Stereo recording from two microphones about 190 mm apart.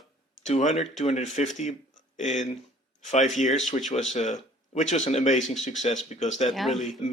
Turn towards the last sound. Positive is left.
turn(degrees=0)  # may be behind; listen again after turning